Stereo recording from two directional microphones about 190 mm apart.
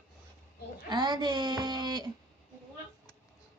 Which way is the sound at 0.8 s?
20° right (ahead or behind).